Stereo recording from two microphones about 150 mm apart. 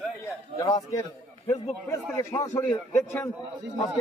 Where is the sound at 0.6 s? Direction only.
25° left (ahead or behind).